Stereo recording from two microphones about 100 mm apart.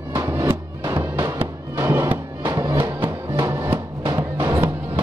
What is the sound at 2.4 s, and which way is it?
Music, 35° right (ahead or behind).